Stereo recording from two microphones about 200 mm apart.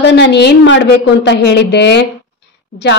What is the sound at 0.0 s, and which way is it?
A woman's voice, 60° left (ahead or behind).